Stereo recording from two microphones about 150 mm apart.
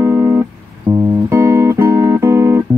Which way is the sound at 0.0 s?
20° right (ahead or behind).